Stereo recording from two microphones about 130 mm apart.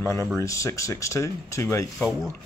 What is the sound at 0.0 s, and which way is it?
Speech, 20° left (ahead or behind).